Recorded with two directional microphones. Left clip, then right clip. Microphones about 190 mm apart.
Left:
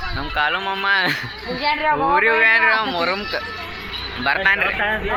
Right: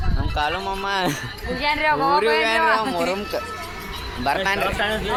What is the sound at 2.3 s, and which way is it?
Speech, 5° right (ahead or behind).